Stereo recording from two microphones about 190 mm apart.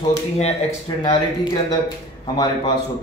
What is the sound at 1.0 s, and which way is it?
A man's voice, 20° left (ahead or behind).